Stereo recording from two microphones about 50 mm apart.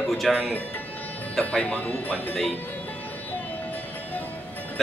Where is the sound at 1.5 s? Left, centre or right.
Left.